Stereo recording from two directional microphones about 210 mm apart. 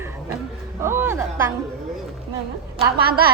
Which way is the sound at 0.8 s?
10° right (ahead or behind).